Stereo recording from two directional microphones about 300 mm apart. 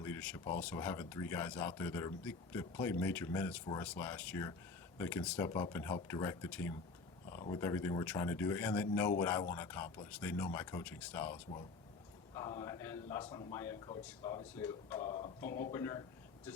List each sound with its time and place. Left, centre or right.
0.0 s a man's voice: centre